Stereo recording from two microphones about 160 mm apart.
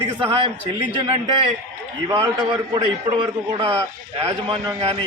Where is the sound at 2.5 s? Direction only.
30° right (ahead or behind).